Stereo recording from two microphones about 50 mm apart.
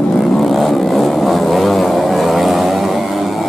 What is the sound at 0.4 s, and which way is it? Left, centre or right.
Vehicle, centre.